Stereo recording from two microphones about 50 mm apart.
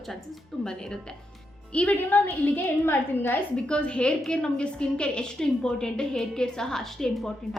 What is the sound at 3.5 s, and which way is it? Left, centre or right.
A woman's voice, centre.